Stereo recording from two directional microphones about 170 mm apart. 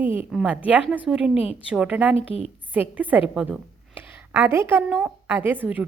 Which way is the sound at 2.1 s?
35° left (ahead or behind).